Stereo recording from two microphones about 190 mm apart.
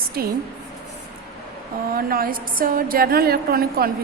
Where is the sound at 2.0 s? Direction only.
50° right (ahead or behind).